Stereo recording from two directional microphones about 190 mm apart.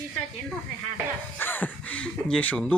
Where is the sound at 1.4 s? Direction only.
10° left (ahead or behind).